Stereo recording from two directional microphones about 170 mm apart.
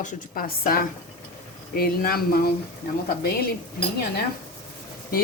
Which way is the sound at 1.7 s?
60° left (ahead or behind).